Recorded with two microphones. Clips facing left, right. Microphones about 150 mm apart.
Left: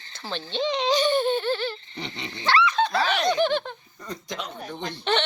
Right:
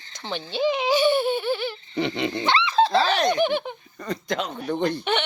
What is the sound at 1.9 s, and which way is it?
Dog, 80° right.